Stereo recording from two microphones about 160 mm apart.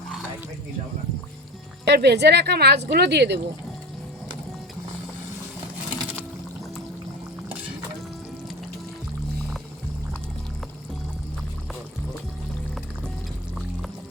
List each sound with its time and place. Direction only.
1.8 s speech: 90° right